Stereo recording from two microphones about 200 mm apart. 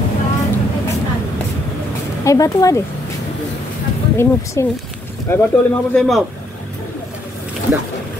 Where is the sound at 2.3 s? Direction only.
15° left (ahead or behind).